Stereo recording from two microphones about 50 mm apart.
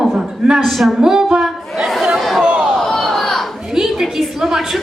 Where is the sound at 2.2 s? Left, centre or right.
Centre.